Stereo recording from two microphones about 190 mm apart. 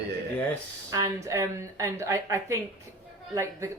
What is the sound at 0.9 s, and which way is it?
Speech, 15° right (ahead or behind).